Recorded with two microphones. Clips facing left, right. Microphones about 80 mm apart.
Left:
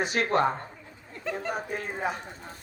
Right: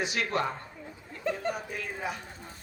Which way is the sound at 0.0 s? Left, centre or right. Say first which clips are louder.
Left 5 dB; left.